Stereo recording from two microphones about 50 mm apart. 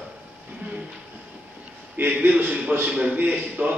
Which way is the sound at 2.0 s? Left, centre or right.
Right.